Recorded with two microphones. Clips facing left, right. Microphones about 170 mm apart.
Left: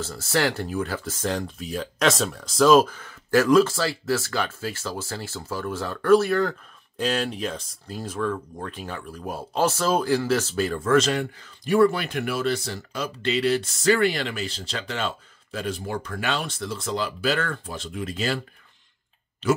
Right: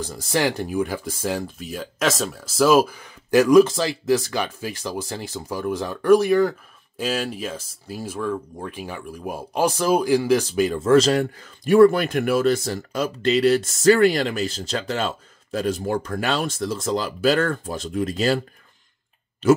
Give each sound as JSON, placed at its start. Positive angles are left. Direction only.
{"t": 0.0, "sound": "speech", "side_deg": -15}
{"t": 10.9, "sound": "speech", "side_deg": -35}